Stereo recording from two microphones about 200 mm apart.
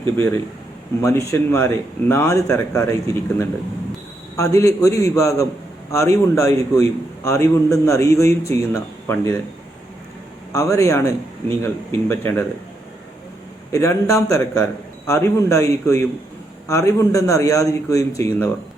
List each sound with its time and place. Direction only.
1.0 s speech: 15° left (ahead or behind)
10.5 s speech: 15° left (ahead or behind)
13.7 s speech: 15° left (ahead or behind)